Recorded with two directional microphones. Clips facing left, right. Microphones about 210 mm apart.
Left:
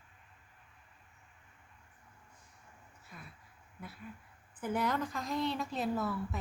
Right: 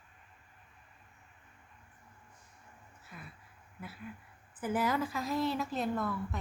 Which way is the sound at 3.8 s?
Centre (ahead or behind).